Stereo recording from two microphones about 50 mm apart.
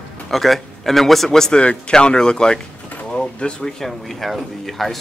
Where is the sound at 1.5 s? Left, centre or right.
Left; by 5.0 s centre.